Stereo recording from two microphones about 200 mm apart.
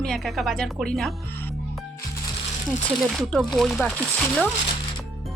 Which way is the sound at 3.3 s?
Centre (ahead or behind).